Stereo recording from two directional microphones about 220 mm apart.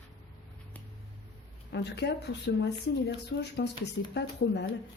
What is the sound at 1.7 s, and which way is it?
Speech, 50° left (ahead or behind).